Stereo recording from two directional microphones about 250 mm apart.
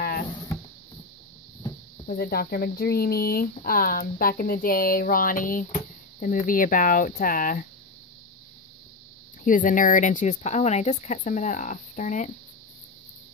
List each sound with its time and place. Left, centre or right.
0.0 s a sound: left
2.0 s speech: left
9.4 s speech: left